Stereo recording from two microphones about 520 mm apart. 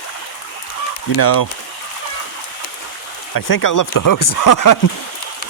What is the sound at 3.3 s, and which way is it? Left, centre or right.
Speech, left.